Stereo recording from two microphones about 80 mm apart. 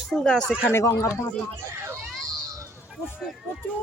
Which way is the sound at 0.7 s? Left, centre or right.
Left.